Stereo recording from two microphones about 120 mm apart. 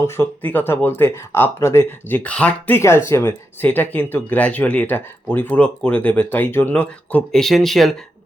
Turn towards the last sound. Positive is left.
turn(degrees=0)  # may be behind; listen again after turning